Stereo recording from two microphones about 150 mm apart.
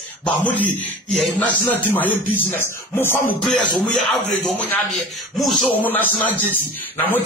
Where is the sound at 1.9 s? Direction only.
15° left (ahead or behind).